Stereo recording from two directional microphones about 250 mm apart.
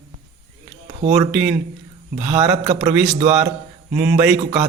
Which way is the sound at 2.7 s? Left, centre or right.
Centre.